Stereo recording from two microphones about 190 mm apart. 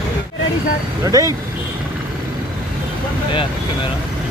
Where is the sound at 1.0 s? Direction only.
20° right (ahead or behind).